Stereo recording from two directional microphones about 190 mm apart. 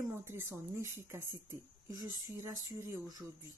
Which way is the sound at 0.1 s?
15° right (ahead or behind).